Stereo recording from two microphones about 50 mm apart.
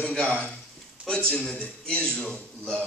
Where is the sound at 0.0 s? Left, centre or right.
Left.